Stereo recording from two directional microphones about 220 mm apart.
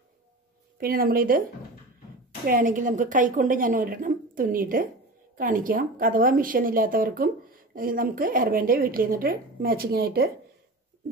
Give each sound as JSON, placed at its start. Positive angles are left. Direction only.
{"t": 0.7, "sound": "a woman's voice", "side_deg": -40}